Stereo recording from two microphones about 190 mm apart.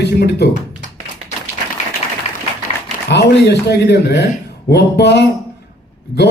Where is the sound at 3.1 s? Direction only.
60° left (ahead or behind).